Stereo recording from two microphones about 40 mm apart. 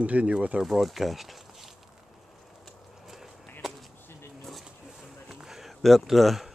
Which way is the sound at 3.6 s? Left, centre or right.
Centre.